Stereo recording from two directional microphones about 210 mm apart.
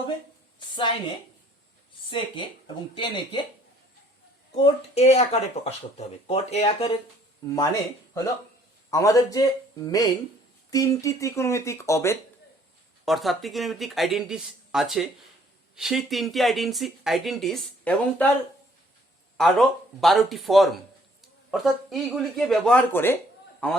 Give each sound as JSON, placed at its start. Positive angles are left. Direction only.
{"t": 2.0, "sound": "speech", "side_deg": 25}
{"t": 4.5, "sound": "speech", "side_deg": 30}
{"t": 13.1, "sound": "speech", "side_deg": 0}
{"t": 19.4, "sound": "speech", "side_deg": 0}